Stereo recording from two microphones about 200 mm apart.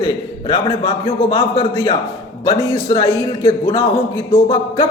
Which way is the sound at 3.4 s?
25° left (ahead or behind).